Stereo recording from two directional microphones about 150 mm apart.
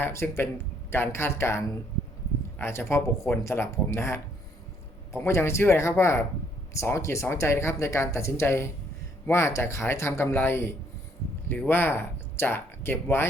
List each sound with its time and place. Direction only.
0.0 s speech: 15° left (ahead or behind)